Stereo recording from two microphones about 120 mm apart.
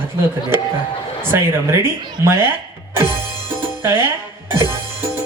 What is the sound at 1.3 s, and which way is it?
Speech, 20° right (ahead or behind).